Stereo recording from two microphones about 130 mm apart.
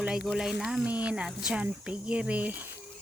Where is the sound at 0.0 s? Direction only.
5° right (ahead or behind).